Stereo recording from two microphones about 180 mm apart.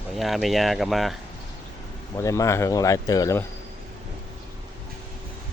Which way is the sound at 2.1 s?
15° left (ahead or behind).